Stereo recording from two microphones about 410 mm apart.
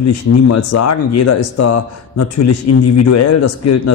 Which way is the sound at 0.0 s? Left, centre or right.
Left.